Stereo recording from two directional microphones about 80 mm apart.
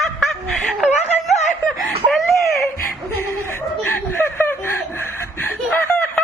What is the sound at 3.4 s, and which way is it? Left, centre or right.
Chuckle, left.